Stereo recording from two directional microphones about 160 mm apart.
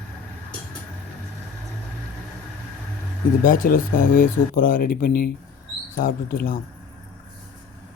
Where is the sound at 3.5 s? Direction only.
60° left (ahead or behind).